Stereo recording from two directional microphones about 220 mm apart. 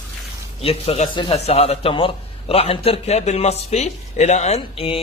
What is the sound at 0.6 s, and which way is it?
Speech, 25° left (ahead or behind).